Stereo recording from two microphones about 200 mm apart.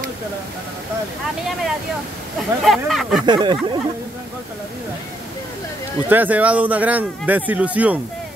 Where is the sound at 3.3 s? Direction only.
20° right (ahead or behind).